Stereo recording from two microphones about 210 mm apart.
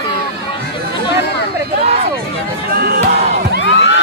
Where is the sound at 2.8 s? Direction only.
45° right (ahead or behind).